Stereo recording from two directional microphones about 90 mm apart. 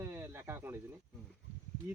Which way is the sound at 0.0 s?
30° right (ahead or behind).